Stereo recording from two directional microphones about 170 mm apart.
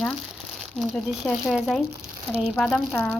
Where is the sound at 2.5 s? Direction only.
10° left (ahead or behind).